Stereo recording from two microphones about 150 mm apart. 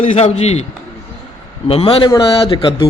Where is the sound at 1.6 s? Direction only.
40° left (ahead or behind).